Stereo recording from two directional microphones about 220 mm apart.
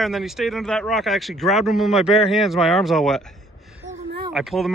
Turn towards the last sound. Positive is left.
turn(degrees=0)  # may be behind; listen again after turning